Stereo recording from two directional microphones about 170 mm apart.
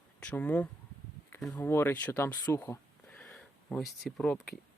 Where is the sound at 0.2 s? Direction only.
10° left (ahead or behind).